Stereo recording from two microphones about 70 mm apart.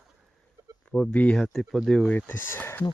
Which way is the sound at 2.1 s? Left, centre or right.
Left.